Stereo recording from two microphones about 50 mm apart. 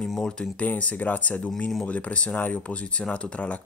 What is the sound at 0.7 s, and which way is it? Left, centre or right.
Speech, left.